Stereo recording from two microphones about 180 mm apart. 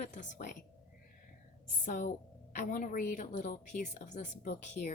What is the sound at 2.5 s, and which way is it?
A woman's voice, 50° left (ahead or behind).